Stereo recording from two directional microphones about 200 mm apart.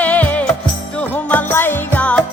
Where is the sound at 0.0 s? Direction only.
10° left (ahead or behind).